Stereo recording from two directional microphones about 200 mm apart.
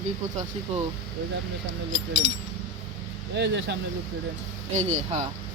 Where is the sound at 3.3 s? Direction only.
60° right (ahead or behind).